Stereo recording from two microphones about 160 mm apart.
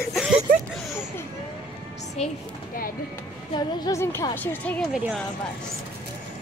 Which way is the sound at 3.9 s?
20° left (ahead or behind).